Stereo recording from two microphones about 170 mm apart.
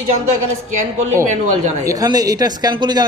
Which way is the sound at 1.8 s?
20° right (ahead or behind).